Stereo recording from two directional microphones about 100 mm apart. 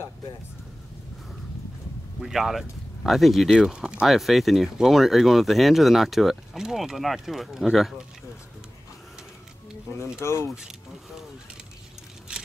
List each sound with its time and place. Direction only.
2.2 s speech: 5° right (ahead or behind)
10.2 s speech: 25° left (ahead or behind)
12.3 s a sound: 10° right (ahead or behind)